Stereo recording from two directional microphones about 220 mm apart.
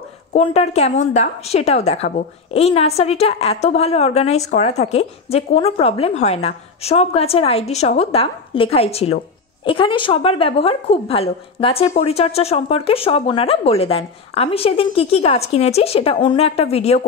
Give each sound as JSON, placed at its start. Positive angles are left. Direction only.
{"t": 0.3, "sound": "a woman's voice", "side_deg": 30}